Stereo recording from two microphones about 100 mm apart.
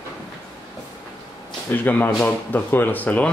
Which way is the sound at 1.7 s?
20° left (ahead or behind).